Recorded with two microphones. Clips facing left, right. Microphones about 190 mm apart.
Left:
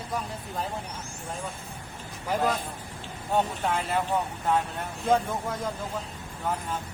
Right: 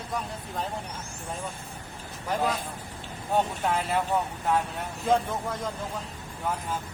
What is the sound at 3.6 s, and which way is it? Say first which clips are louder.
Speech: right 1 dB; centre (ahead or behind).